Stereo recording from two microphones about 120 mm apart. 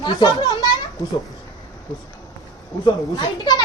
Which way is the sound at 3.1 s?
35° left (ahead or behind).